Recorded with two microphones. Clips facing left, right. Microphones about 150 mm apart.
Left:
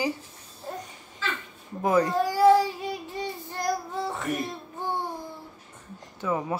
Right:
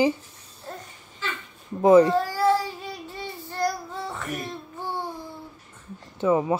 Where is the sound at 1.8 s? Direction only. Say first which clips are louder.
Right 8 dB; 25° right (ahead or behind).